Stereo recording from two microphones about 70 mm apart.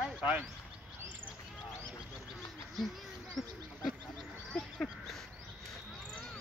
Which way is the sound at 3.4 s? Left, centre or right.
Centre.